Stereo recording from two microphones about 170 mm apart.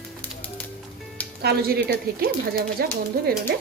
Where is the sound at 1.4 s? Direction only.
70° right (ahead or behind).